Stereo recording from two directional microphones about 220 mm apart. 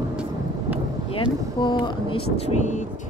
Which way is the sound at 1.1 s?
20° left (ahead or behind).